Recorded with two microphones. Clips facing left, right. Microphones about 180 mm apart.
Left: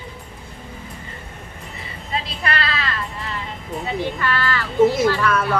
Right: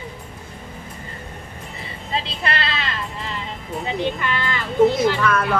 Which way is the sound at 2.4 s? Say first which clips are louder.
Left 1 dB; 25° right (ahead or behind).